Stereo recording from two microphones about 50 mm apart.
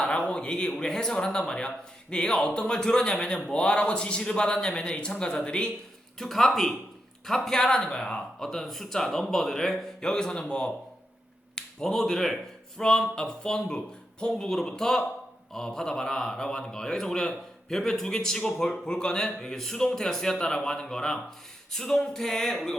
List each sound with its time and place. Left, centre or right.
0.0 s a sound: left
0.8 s a man's voice: centre
6.1 s a man's voice: centre